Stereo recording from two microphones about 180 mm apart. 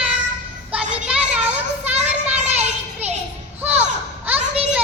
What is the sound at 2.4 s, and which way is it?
Children playing, 35° right (ahead or behind).